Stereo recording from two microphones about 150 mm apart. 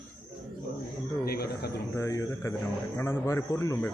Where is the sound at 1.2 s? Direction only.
90° left.